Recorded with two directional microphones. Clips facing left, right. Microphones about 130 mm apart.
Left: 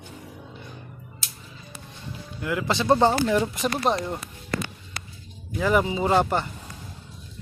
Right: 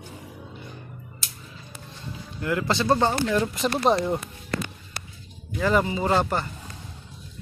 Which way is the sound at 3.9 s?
Centre (ahead or behind).